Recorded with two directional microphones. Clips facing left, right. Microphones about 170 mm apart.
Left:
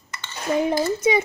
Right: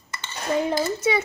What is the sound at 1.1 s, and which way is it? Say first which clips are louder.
Speech: left 3 dB; 15° left (ahead or behind).